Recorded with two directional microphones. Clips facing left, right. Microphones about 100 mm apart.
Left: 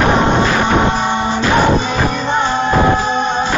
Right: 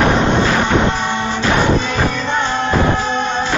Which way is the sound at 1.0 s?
15° left (ahead or behind).